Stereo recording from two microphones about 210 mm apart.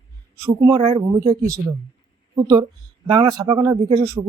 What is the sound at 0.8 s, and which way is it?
Speech, 30° right (ahead or behind).